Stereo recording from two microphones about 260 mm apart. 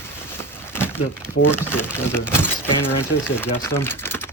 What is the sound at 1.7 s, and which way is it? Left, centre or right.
Speech, centre.